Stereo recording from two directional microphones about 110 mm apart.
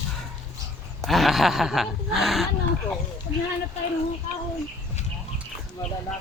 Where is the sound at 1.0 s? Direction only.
Centre (ahead or behind).